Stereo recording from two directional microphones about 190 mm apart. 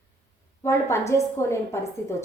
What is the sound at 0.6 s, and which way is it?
A woman's voice, 15° left (ahead or behind).